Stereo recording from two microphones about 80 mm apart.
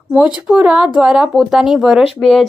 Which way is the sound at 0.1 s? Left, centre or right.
Centre.